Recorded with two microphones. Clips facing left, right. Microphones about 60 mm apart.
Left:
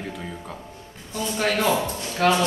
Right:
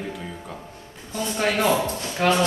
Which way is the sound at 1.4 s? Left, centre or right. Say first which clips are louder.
Right 1 dB; centre.